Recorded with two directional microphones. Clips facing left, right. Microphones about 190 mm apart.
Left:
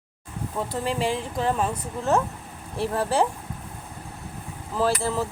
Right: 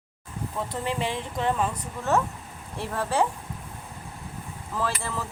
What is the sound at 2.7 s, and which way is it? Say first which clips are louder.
Speech: left 3 dB; 30° left (ahead or behind).